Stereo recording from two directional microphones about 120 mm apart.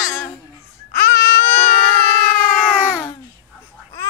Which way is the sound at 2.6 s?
15° left (ahead or behind).